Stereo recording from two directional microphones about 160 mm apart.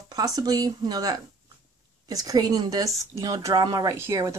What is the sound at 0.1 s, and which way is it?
Speech, 25° right (ahead or behind).